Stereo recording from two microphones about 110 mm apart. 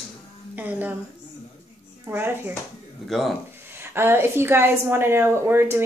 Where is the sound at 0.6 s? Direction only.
15° right (ahead or behind).